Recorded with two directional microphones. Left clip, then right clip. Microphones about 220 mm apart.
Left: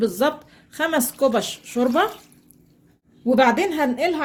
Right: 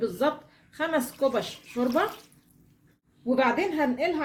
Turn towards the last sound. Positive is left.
turn(degrees=50)  # may be behind; listen again after turning